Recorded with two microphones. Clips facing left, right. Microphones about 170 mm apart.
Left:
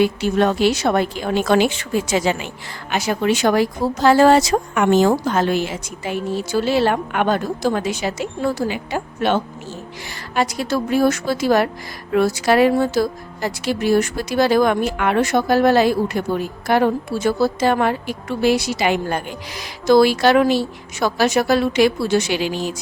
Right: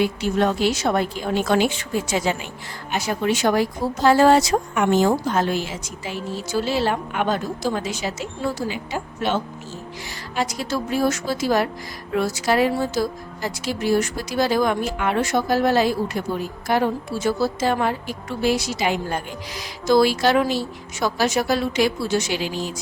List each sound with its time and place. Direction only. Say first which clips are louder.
0.0 s speech: left 3 dB; 70° left (ahead or behind)